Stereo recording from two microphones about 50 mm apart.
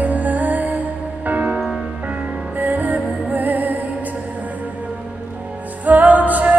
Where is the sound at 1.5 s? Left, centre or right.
Centre.